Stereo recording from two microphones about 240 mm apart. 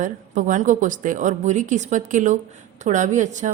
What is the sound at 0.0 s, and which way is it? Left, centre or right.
A woman's voice, right.